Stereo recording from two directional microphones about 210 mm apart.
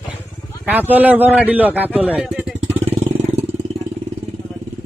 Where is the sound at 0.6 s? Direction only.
10° right (ahead or behind).